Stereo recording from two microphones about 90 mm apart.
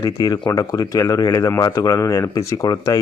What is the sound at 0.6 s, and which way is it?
Speech, 45° left (ahead or behind).